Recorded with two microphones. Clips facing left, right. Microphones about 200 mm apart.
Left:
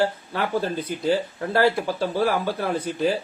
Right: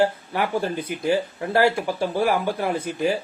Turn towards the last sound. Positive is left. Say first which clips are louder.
# even
turn(degrees=-10)  # may be behind; listen again after turning